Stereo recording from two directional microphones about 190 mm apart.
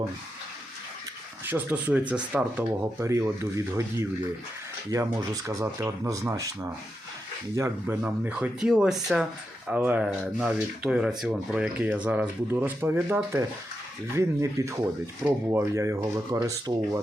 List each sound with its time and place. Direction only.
1.5 s speech: 10° right (ahead or behind)